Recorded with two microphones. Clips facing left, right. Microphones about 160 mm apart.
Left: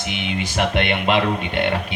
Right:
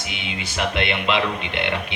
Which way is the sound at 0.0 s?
55° left (ahead or behind).